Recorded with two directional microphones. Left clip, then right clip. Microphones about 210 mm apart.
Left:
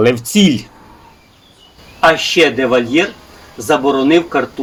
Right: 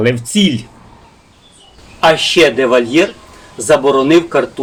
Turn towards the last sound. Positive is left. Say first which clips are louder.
# right 2 dB
turn(degrees=-5)  # may be behind; listen again after turning